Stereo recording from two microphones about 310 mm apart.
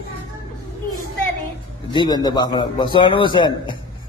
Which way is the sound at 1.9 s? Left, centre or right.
Centre.